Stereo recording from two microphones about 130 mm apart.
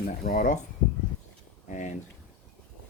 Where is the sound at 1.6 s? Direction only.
70° left (ahead or behind).